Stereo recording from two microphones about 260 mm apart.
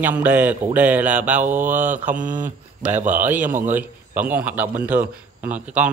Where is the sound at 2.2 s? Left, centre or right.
Right.